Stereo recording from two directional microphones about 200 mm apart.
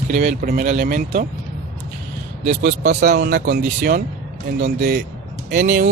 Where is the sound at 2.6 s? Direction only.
50° right (ahead or behind).